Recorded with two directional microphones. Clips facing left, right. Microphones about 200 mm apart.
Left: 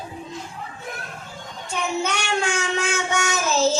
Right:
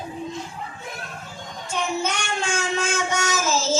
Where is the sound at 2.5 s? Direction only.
65° left (ahead or behind).